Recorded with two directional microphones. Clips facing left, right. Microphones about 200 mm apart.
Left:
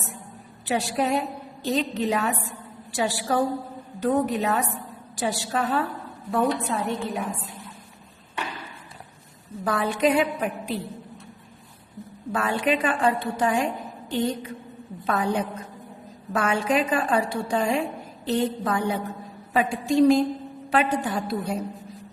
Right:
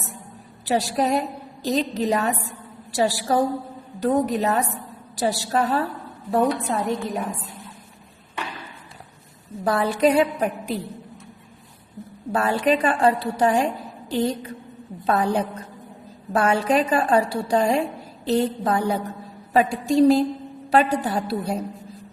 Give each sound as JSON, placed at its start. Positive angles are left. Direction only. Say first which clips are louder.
{"t": 0.6, "sound": "a woman's voice", "louder": "right 3 dB", "side_deg": -40}
{"t": 9.6, "sound": "a woman's voice", "louder": "right 3 dB", "side_deg": -35}
{"t": 12.3, "sound": "a woman's voice", "louder": "right 4 dB", "side_deg": -35}